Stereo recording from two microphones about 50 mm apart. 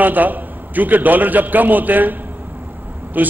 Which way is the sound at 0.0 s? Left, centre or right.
Right.